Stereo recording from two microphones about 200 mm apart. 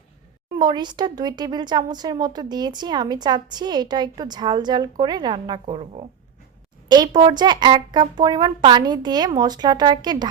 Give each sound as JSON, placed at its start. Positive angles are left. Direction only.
{"t": 0.6, "sound": "a woman's voice", "side_deg": -20}